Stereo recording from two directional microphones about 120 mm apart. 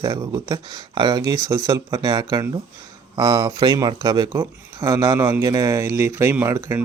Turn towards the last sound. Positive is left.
turn(degrees=-20)  # may be behind; listen again after turning